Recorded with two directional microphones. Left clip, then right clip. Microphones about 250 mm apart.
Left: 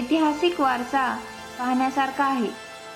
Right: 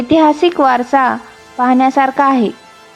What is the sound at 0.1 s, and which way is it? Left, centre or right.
A woman's voice, right.